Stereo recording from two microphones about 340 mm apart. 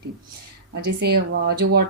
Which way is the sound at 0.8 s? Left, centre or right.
Right.